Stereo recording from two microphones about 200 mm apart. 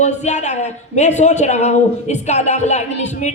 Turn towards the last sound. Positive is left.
turn(degrees=35)  # may be behind; listen again after turning